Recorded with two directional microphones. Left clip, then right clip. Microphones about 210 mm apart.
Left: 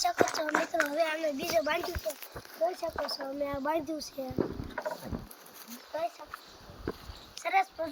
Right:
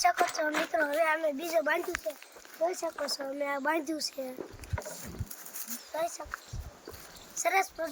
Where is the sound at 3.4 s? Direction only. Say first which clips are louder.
Right 1 dB; 10° right (ahead or behind).